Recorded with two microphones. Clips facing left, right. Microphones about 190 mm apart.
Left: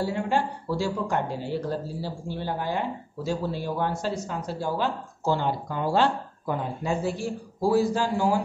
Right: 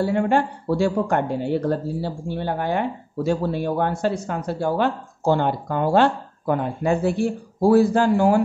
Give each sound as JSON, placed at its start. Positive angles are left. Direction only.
{"t": 0.0, "sound": "speech", "side_deg": -60}